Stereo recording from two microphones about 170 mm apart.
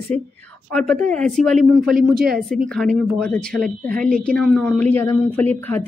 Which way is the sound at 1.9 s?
60° right (ahead or behind).